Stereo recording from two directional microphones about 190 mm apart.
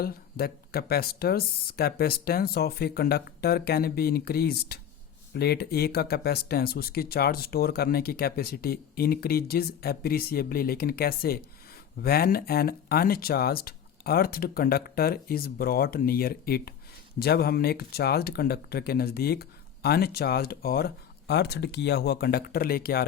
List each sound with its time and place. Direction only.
0.0 s speech: 55° left (ahead or behind)